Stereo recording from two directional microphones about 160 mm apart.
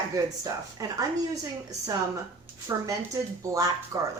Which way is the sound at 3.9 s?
20° right (ahead or behind).